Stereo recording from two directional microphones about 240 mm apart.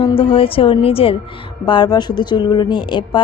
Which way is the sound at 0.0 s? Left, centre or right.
Left.